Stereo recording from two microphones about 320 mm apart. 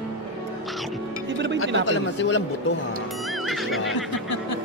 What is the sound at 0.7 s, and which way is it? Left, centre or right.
Music, centre.